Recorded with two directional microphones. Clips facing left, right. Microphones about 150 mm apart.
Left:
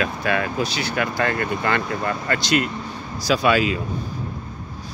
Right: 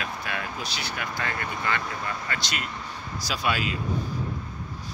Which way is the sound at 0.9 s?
70° left (ahead or behind).